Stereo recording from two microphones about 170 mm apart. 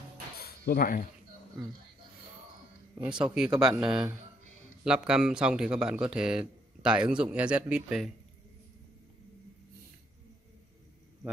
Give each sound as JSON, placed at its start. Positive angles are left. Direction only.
{"t": 0.4, "sound": "a sound", "side_deg": 65}
{"t": 3.1, "sound": "speech", "side_deg": -25}
{"t": 3.3, "sound": "speech", "side_deg": -5}